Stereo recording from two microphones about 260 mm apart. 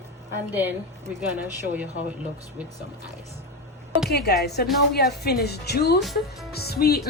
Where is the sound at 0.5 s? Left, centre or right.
Centre.